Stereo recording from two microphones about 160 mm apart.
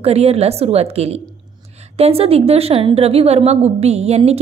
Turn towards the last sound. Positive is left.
turn(degrees=-40)  # may be behind; listen again after turning